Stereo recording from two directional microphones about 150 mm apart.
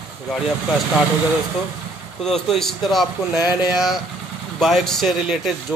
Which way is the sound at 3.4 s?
25° left (ahead or behind).